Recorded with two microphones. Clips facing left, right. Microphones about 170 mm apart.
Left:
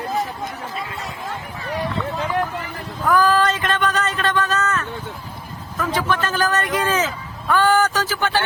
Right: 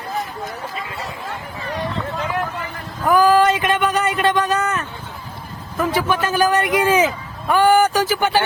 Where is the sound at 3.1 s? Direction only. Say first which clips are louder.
Right 3 dB; 10° right (ahead or behind).